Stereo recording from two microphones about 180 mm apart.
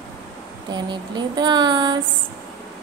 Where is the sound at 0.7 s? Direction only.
25° right (ahead or behind).